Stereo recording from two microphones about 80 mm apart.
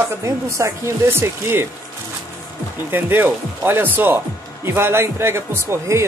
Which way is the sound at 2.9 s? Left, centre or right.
Right.